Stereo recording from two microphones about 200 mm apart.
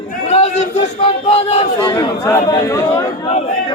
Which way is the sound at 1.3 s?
30° left (ahead or behind).